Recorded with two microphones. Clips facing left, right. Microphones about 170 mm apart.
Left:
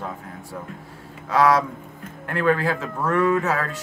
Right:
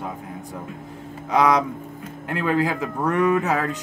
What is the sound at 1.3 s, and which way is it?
Speech, 20° right (ahead or behind).